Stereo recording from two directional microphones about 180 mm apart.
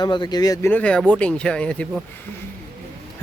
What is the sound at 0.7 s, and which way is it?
Speech, 5° left (ahead or behind).